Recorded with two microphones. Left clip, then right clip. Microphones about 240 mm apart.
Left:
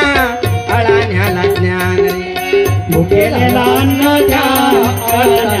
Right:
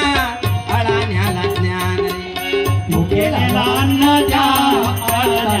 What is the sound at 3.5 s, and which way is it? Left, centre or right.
Music, left.